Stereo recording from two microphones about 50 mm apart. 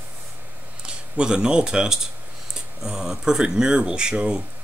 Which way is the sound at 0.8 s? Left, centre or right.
Centre.